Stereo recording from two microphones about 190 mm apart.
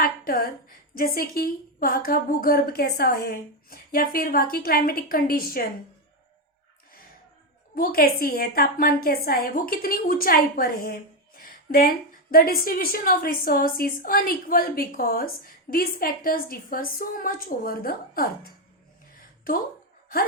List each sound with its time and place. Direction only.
0.0 s a woman's voice: 50° left (ahead or behind)
7.8 s a woman's voice: 50° left (ahead or behind)
19.1 s a sound: 50° left (ahead or behind)